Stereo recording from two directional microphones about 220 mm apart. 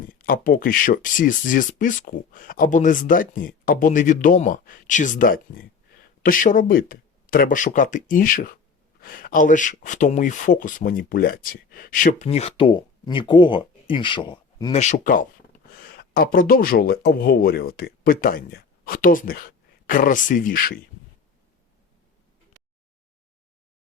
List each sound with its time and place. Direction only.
0.1 s speech: 40° left (ahead or behind)